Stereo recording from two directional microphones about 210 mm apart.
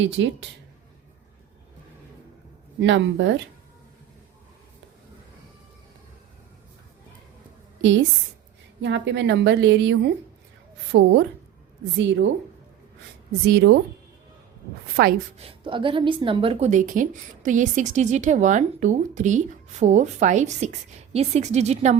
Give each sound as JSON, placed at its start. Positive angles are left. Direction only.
{"t": 0.0, "sound": "a woman's voice", "side_deg": -60}
{"t": 2.8, "sound": "a woman's voice", "side_deg": -60}
{"t": 7.8, "sound": "a woman's voice", "side_deg": -65}
{"t": 11.9, "sound": "a woman's voice", "side_deg": -65}
{"t": 13.5, "sound": "a woman's voice", "side_deg": -50}
{"t": 15.0, "sound": "a woman's voice", "side_deg": -50}
{"t": 15.4, "sound": "a woman's voice", "side_deg": -25}